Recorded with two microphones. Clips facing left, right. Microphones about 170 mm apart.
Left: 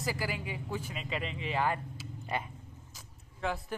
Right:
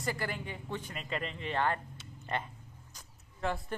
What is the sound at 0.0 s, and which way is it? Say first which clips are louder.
A man's voice: left 1 dB; 5° left (ahead or behind).